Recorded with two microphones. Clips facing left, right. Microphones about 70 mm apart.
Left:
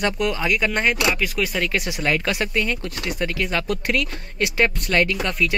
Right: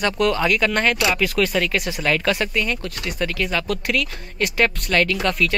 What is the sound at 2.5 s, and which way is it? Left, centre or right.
Speech, left.